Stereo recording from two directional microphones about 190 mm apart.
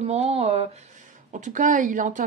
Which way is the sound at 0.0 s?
35° right (ahead or behind).